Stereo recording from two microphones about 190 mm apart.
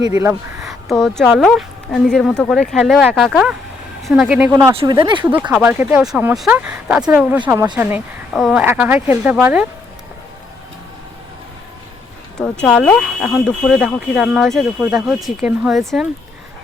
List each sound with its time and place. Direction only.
0.6 s speech: centre (ahead or behind)
4.5 s speech: 25° right (ahead or behind)
5.4 s speech: 10° right (ahead or behind)
12.4 s speech: 5° left (ahead or behind)